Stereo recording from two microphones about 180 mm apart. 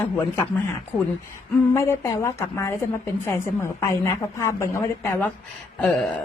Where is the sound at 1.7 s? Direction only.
15° left (ahead or behind).